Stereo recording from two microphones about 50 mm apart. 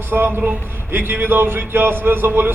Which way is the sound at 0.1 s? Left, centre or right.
Right.